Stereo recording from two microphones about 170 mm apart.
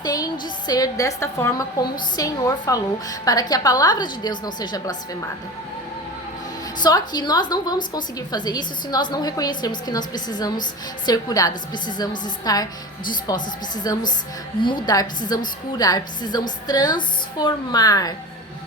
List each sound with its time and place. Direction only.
0.0 s music: 20° left (ahead or behind)
0.7 s a woman's voice: 20° left (ahead or behind)
6.7 s a woman's voice: 25° left (ahead or behind)